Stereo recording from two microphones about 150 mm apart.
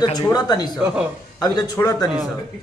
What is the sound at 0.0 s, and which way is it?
Speech, 25° left (ahead or behind).